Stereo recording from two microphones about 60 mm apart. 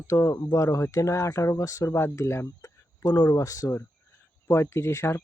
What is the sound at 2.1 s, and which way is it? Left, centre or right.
Speech, left.